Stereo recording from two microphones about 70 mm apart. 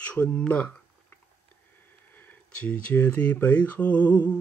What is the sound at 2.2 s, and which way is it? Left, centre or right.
Speech, left.